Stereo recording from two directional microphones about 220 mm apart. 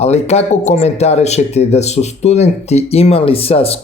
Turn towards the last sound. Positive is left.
turn(degrees=25)  # may be behind; listen again after turning